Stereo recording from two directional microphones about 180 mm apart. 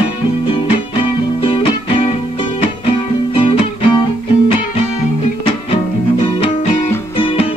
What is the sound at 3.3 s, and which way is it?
Music, 30° left (ahead or behind).